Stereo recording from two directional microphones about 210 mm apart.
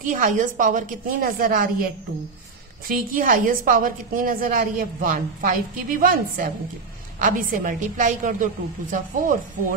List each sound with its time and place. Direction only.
0.0 s a woman's voice: 40° right (ahead or behind)
2.9 s a woman's voice: 40° right (ahead or behind)